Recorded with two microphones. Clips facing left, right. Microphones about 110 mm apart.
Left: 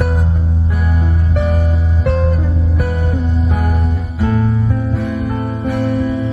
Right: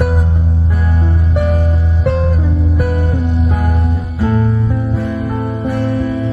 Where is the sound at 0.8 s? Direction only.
5° left (ahead or behind).